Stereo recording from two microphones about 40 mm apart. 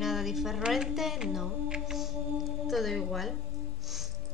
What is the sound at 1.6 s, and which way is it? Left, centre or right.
Music, centre.